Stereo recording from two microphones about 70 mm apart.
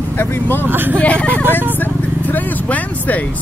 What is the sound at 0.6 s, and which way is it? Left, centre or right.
Speech, right.